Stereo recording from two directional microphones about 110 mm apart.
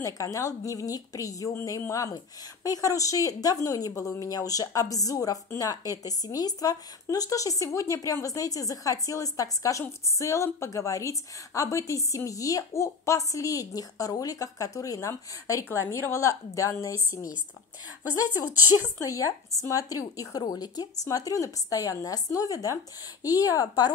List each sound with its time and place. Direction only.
0.0 s speech: 30° left (ahead or behind)
18.8 s speech: 30° left (ahead or behind)